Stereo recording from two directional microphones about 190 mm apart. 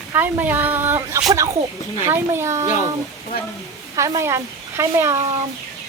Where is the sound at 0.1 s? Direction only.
10° right (ahead or behind).